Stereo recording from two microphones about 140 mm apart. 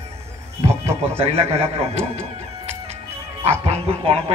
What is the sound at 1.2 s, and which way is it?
Speech, 45° right (ahead or behind).